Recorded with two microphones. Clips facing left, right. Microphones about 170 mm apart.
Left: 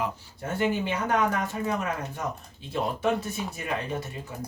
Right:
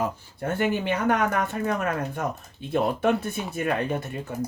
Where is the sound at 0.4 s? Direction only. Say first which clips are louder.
Right 2 dB; 60° right (ahead or behind).